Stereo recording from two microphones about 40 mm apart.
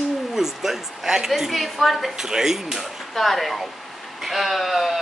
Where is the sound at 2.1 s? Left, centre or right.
Centre.